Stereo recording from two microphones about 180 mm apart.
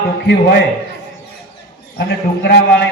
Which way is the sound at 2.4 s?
65° left (ahead or behind).